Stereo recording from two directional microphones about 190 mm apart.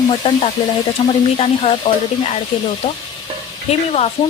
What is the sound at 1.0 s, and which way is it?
A woman's voice, 30° left (ahead or behind).